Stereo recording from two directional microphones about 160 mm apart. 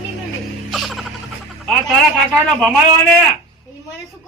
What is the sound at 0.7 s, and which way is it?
Music, centre (ahead or behind).